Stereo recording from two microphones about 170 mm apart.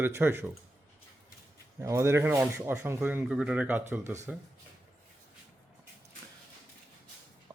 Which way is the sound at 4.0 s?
45° right (ahead or behind).